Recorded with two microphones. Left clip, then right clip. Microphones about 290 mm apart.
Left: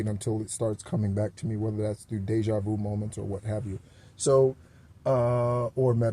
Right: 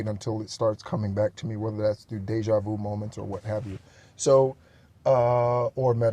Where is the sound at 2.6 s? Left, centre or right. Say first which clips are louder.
Right 1 dB; right.